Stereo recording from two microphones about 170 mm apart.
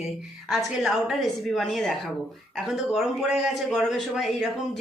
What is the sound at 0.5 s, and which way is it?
A man's voice, centre (ahead or behind).